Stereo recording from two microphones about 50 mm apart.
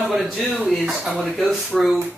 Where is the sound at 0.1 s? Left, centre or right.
Centre.